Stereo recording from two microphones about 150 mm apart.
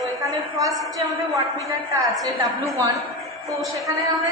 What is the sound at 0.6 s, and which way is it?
Speech, 20° right (ahead or behind).